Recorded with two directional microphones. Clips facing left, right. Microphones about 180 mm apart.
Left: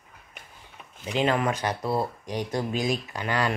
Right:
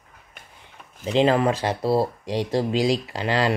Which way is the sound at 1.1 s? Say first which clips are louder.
Right 6 dB; 30° right (ahead or behind).